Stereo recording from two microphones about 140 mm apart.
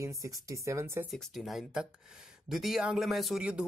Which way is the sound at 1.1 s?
Centre (ahead or behind).